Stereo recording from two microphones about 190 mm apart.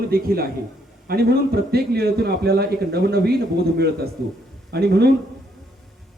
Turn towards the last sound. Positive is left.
turn(degrees=-60)  # may be behind; listen again after turning